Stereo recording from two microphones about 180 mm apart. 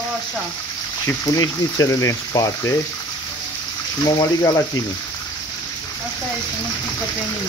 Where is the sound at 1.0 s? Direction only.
20° left (ahead or behind).